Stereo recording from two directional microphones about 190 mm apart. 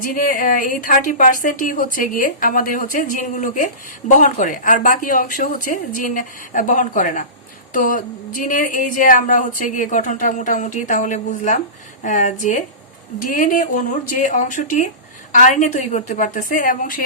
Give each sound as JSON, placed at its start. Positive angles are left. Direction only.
{"t": 0.0, "sound": "a woman's voice", "side_deg": 45}